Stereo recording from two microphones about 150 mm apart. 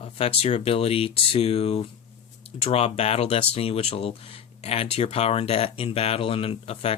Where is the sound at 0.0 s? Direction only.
40° left (ahead or behind).